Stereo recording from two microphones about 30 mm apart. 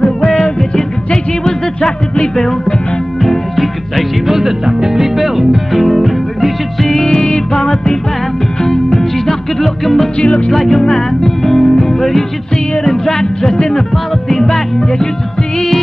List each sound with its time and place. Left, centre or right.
1.4 s music: centre
4.3 s music: centre
7.0 s music: left
7.6 s music: centre
14.3 s music: centre